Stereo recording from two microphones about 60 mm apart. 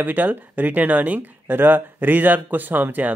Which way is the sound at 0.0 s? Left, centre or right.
Right.